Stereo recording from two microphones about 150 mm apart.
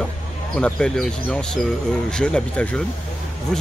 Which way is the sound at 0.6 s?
5° left (ahead or behind).